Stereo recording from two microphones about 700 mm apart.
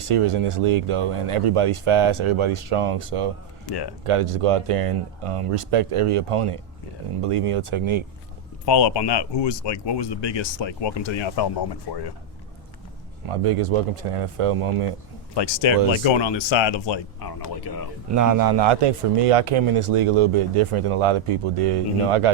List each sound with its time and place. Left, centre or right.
0.1 s a man's voice: right
3.7 s speech: left
4.0 s a man's voice: right
8.6 s speech: left
13.2 s a man's voice: right
15.4 s speech: left
18.1 s a man's voice: right